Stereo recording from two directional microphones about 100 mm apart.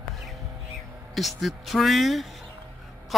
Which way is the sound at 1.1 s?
Centre (ahead or behind).